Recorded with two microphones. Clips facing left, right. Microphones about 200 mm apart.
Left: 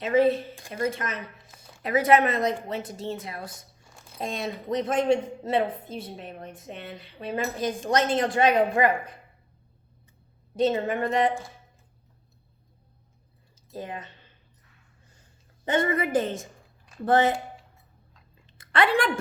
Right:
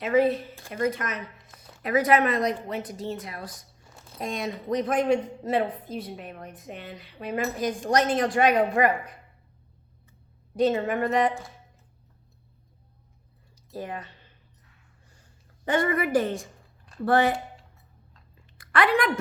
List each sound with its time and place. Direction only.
0.0 s a woman's voice: 25° left (ahead or behind)
3.8 s a sound: 5° right (ahead or behind)
4.2 s a woman's voice: 25° left (ahead or behind)
10.6 s a woman's voice: 25° left (ahead or behind)
13.7 s a woman's voice: 20° left (ahead or behind)
15.6 s a woman's voice: 20° left (ahead or behind)
18.5 s a sound: 25° left (ahead or behind)